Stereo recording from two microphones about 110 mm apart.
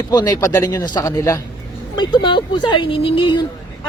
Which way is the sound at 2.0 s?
45° left (ahead or behind).